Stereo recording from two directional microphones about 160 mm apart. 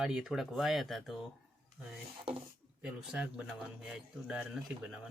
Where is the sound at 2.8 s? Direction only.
10° right (ahead or behind).